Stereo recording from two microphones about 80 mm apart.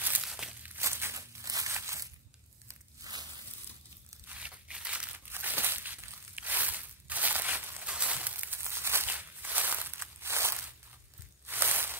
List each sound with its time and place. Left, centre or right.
0.2 s a sound: centre
0.7 s crumpling: right
1.4 s crumpling: right
1.7 s crushing: right
2.7 s biting: right
4.3 s crumpling: centre
5.1 s crumpling: right
7.8 s a sound: centre
9.1 s walk: right
11.4 s a sound: right